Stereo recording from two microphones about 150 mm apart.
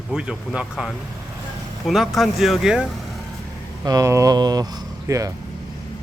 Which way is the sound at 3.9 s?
20° right (ahead or behind).